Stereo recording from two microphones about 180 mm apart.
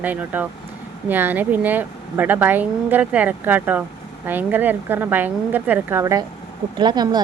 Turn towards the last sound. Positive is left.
turn(degrees=-25)  # may be behind; listen again after turning